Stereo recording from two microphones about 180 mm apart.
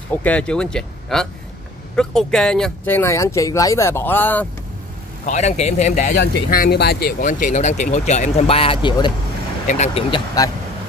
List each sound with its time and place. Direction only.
0.1 s speech: 10° left (ahead or behind)
5.2 s a man's voice: 40° left (ahead or behind)
6.1 s speech: 60° left (ahead or behind); by 9.1 s 25° left (ahead or behind)
9.7 s a man's voice: 40° left (ahead or behind)
10.1 s speech: 20° left (ahead or behind)